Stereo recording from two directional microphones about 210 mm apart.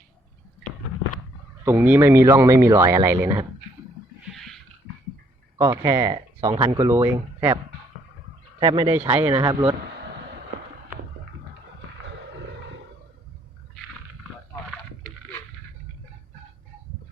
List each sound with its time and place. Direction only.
1.6 s speech: 10° right (ahead or behind)
4.4 s a sound: centre (ahead or behind)
5.5 s speech: 15° right (ahead or behind)
6.8 s speech: 10° right (ahead or behind)
7.1 s speech: 20° right (ahead or behind)